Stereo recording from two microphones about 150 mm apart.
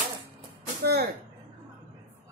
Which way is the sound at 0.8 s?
90° right.